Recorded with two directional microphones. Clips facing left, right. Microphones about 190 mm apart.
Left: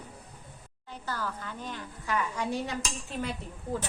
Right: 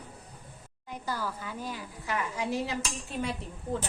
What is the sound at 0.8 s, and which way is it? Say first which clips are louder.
A woman's voice: right 1 dB; 10° right (ahead or behind).